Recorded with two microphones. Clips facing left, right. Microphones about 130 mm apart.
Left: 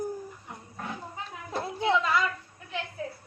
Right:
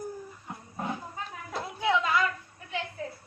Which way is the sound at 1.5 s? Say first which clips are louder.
Left 2 dB; 30° left (ahead or behind).